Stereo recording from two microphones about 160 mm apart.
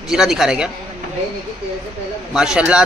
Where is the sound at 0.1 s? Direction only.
Centre (ahead or behind).